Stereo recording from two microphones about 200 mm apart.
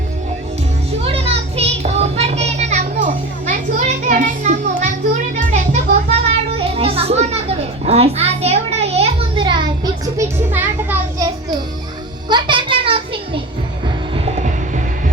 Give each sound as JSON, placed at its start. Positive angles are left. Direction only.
{"t": 0.9, "sound": "child singing", "side_deg": -30}
{"t": 4.1, "sound": "music", "side_deg": -40}
{"t": 12.3, "sound": "a sound", "side_deg": -25}
{"t": 13.8, "sound": "music", "side_deg": -30}